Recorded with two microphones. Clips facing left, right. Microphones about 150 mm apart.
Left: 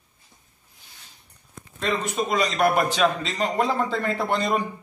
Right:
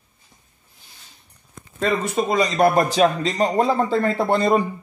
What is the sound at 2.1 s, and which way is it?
Speech, 30° right (ahead or behind).